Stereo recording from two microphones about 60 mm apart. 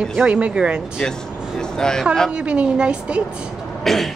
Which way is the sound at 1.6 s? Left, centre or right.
Centre.